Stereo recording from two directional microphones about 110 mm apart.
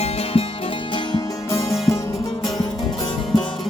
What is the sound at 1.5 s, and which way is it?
Music, 25° left (ahead or behind).